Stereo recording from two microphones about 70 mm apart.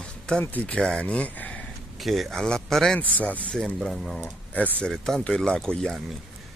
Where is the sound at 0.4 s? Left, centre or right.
Left.